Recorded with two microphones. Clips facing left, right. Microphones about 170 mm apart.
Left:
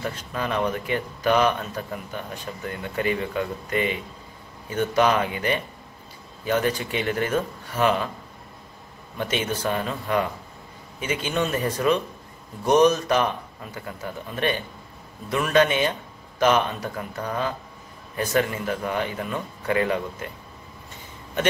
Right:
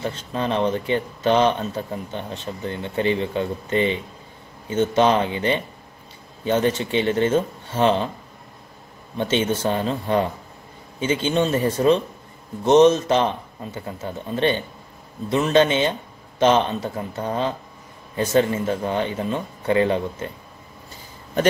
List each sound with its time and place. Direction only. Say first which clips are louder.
0.0 s speech: right 3 dB; 25° right (ahead or behind)
9.1 s speech: right 5 dB; 30° right (ahead or behind)